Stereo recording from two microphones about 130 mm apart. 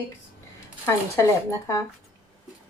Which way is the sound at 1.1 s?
20° left (ahead or behind).